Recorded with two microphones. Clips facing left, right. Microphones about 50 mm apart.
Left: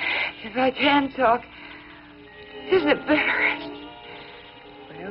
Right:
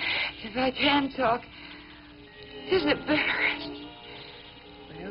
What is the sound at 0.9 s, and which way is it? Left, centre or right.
Speech, centre.